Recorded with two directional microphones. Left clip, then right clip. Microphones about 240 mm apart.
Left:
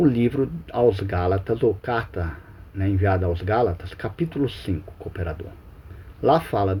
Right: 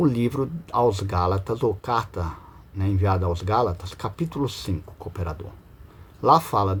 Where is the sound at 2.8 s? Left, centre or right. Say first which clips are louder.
Left 2 dB; centre.